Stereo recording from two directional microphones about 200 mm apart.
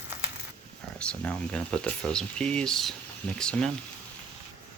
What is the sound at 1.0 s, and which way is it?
Speech, 5° left (ahead or behind).